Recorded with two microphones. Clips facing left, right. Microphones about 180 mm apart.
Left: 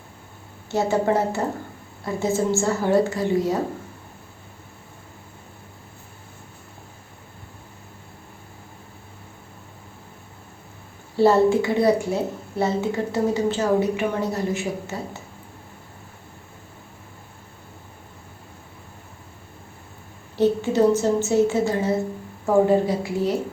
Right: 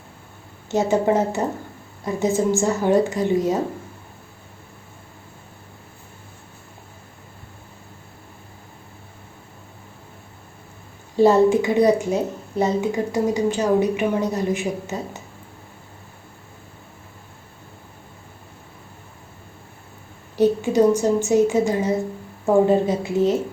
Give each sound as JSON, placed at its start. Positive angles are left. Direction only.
{"t": 0.7, "sound": "a woman's voice", "side_deg": -20}
{"t": 11.2, "sound": "a woman's voice", "side_deg": -15}
{"t": 20.3, "sound": "a woman's voice", "side_deg": -15}